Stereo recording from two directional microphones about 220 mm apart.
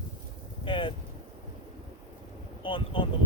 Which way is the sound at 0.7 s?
25° left (ahead or behind).